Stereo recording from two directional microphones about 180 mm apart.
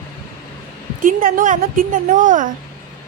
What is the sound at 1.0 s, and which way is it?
A woman's voice, 50° right (ahead or behind).